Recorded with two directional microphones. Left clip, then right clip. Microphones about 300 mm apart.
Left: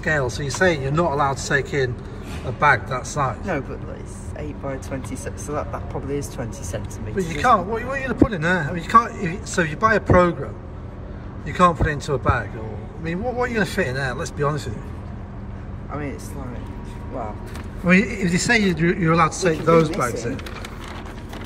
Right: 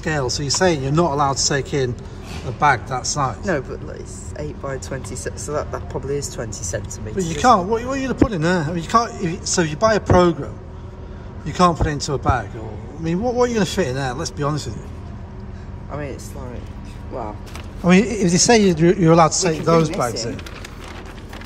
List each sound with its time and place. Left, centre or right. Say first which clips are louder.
0.0 s speech: even; centre
5.2 s speech: right 4 dB; right
7.4 s a man's voice: right 3 dB; centre
17.8 s a man's voice: right 2 dB; centre